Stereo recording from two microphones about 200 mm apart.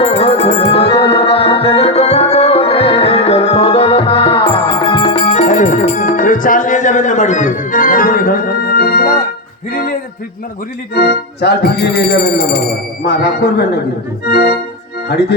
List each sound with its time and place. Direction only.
0.0 s music: 30° left (ahead or behind); by 9.1 s 50° left (ahead or behind)
10.9 s speech: 55° left (ahead or behind)